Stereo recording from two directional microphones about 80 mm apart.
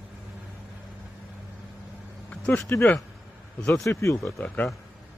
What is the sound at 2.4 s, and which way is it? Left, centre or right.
Speech, centre.